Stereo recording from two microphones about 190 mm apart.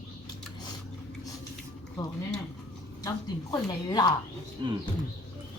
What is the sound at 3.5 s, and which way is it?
Speech, 20° left (ahead or behind).